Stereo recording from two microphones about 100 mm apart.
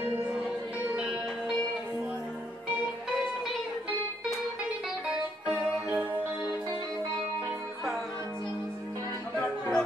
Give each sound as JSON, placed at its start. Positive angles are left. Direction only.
{"t": 0.0, "sound": "music", "side_deg": -20}
{"t": 5.9, "sound": "music", "side_deg": -20}
{"t": 9.4, "sound": "music", "side_deg": 10}